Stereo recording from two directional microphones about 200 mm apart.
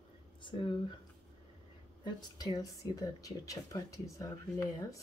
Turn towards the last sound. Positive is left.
turn(degrees=15)  # may be behind; listen again after turning